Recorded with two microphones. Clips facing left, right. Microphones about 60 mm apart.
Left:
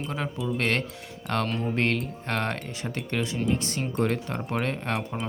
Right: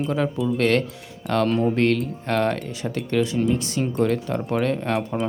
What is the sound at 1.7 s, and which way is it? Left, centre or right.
Speech, left.